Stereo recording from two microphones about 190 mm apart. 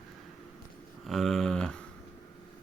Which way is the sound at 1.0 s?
Centre (ahead or behind).